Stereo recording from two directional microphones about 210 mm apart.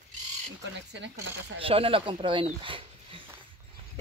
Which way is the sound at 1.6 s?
25° right (ahead or behind).